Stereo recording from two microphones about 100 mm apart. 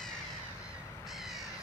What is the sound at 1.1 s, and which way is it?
Crow, centre (ahead or behind).